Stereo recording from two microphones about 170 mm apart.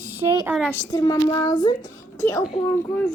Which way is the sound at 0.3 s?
15° right (ahead or behind).